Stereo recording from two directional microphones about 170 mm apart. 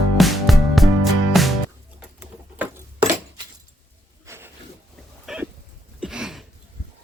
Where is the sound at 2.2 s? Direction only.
10° right (ahead or behind).